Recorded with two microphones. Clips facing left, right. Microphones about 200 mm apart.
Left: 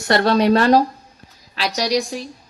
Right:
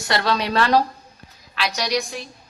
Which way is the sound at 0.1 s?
50° left (ahead or behind).